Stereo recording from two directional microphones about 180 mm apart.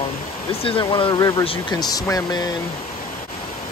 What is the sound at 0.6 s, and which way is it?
Speech, 25° left (ahead or behind).